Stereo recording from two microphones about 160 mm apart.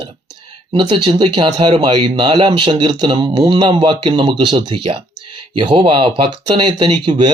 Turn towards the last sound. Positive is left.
turn(degrees=-30)  # may be behind; listen again after turning